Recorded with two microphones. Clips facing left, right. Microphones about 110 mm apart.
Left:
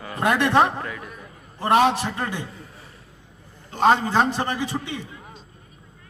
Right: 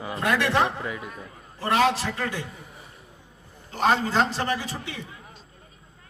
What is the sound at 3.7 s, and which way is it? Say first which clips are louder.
A man's voice: left 4 dB; 20° left (ahead or behind).